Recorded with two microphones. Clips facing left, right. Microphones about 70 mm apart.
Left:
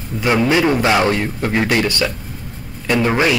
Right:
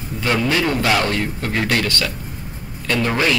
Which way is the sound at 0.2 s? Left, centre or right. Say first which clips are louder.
Left 4 dB; centre.